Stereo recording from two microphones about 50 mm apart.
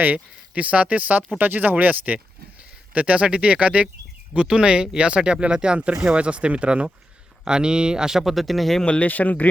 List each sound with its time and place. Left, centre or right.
0.0 s speech: right; by 8.8 s centre
8.8 s speech: left